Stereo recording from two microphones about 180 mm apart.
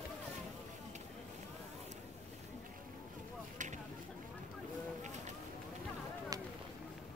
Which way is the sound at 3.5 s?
45° right (ahead or behind).